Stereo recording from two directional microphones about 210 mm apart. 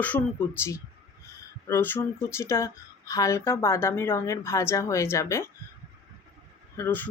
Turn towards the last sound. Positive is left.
turn(degrees=10)  # may be behind; listen again after turning